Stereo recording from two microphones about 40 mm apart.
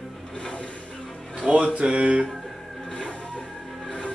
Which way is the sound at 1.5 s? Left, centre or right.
Right.